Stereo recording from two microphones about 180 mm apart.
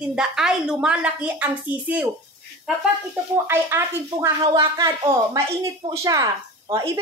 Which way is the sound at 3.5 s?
15° right (ahead or behind).